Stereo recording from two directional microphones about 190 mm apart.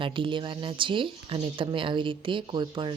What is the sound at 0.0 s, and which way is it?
Speech, 25° right (ahead or behind).